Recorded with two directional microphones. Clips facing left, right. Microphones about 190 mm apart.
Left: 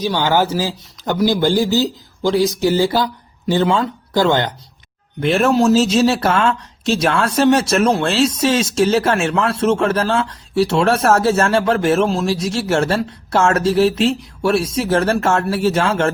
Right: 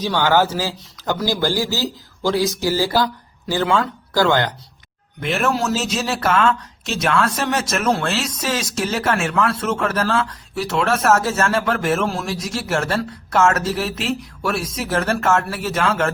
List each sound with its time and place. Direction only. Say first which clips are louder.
0.0 s speech: left 1 dB; 15° left (ahead or behind); by 16.1 s 30° left (ahead or behind)